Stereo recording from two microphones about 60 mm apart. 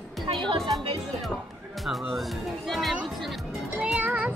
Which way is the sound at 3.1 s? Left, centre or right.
Centre.